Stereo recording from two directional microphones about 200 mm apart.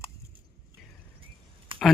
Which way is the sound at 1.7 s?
25° right (ahead or behind).